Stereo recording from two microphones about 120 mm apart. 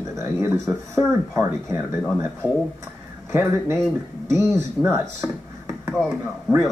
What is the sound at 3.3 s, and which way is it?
Speech, 25° right (ahead or behind).